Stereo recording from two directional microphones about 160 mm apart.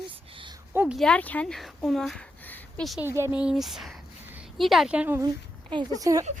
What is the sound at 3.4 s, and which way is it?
A woman's voice, 5° right (ahead or behind).